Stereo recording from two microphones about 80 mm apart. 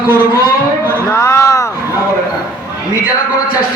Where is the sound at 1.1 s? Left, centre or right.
Left.